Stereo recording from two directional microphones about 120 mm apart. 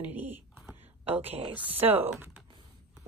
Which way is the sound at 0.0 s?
15° right (ahead or behind).